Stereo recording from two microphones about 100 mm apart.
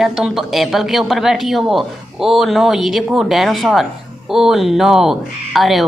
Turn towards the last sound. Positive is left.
turn(degrees=0)  # may be behind; listen again after turning